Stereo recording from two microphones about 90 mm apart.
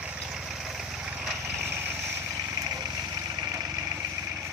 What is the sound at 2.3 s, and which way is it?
Vehicle, 35° right (ahead or behind).